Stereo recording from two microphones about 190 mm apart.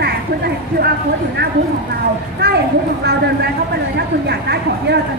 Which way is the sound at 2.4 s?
60° right (ahead or behind).